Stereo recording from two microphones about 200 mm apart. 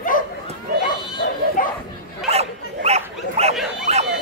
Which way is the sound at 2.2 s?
30° right (ahead or behind).